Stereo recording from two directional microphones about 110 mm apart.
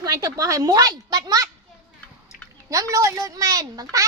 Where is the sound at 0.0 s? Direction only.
35° right (ahead or behind).